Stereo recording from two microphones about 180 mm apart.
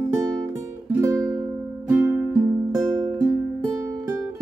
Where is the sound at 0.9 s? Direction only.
20° right (ahead or behind).